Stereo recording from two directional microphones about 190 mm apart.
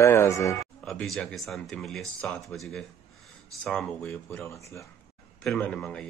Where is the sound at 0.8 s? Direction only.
Centre (ahead or behind).